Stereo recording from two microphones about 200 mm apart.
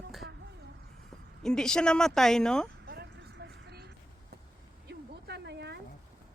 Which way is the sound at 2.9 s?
55° right (ahead or behind).